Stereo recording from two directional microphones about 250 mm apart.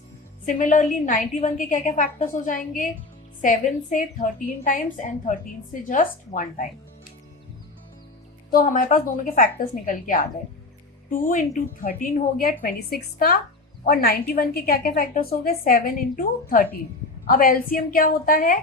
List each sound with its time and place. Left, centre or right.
0.4 s a woman's voice: left
8.4 s a woman's voice: left